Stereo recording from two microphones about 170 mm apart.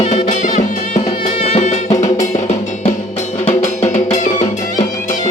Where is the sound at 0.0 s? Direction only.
40° left (ahead or behind).